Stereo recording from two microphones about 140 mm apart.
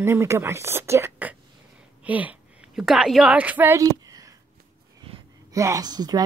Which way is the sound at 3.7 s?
25° right (ahead or behind).